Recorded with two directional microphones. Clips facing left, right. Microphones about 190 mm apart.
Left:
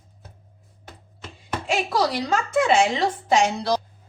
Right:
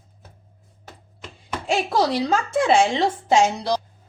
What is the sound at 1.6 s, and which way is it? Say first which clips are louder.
A woman's voice: right 2 dB; 30° right (ahead or behind).